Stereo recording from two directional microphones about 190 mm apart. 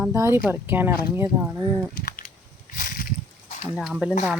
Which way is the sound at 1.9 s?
45° left (ahead or behind).